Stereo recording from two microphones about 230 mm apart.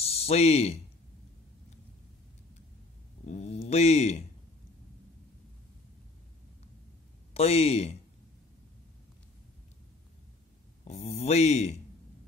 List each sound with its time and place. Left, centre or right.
0.0 s speech: left
3.3 s speech: left
7.3 s speech: left
10.8 s speech: left